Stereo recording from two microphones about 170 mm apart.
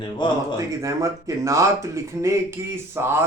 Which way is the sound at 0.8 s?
20° right (ahead or behind).